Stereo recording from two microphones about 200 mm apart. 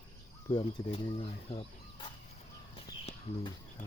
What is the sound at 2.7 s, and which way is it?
Bird, 25° left (ahead or behind).